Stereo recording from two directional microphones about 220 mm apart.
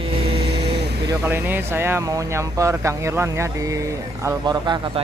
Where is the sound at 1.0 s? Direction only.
10° right (ahead or behind).